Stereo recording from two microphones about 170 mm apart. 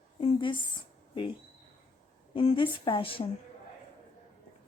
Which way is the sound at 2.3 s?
30° left (ahead or behind).